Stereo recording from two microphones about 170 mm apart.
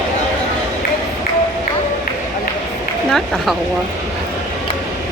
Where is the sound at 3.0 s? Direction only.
Centre (ahead or behind).